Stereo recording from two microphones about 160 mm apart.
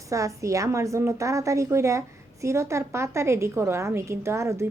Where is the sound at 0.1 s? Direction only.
20° right (ahead or behind).